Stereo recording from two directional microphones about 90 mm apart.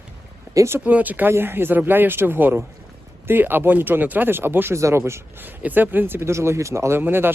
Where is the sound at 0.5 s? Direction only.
30° right (ahead or behind).